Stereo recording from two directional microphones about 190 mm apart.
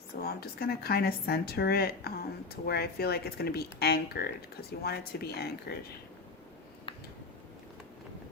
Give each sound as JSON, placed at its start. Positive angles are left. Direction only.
{"t": 0.2, "sound": "speech", "side_deg": 55}